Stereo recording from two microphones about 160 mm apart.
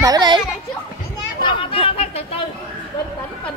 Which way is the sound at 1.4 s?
35° left (ahead or behind).